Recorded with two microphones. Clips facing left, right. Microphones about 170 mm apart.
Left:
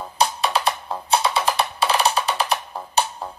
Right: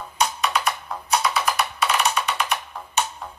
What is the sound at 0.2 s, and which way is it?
Music, 30° left (ahead or behind).